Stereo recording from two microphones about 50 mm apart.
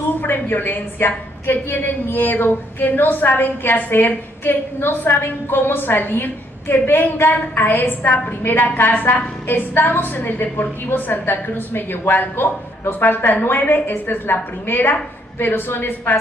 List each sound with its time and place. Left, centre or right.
0.2 s a woman's voice: left